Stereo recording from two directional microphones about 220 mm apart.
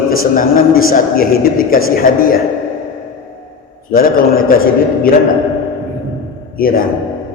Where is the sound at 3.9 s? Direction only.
40° left (ahead or behind).